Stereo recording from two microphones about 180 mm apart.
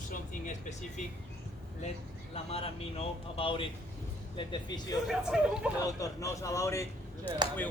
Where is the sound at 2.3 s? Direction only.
35° left (ahead or behind).